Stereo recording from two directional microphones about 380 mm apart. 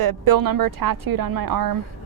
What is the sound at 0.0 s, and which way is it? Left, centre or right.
A woman's voice, right.